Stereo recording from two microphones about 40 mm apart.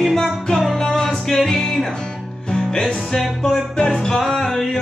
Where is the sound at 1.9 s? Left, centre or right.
Left.